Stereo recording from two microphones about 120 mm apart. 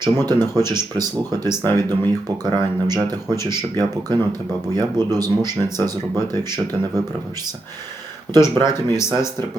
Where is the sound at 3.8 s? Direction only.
35° right (ahead or behind).